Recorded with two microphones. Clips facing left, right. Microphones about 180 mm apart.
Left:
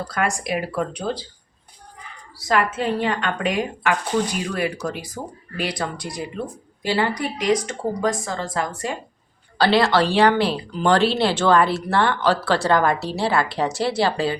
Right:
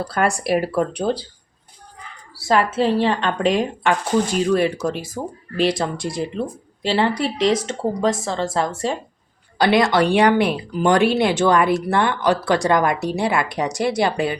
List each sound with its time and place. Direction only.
0.4 s speech: 40° right (ahead or behind)
2.5 s a woman's voice: 30° right (ahead or behind)
9.6 s speech: 15° right (ahead or behind)